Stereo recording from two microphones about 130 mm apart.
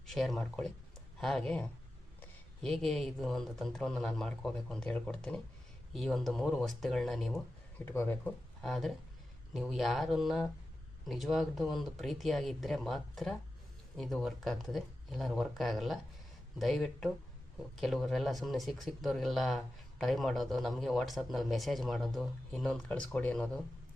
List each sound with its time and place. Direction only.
0.1 s speech: centre (ahead or behind)
7.9 s speech: 15° left (ahead or behind)
8.6 s speech: centre (ahead or behind)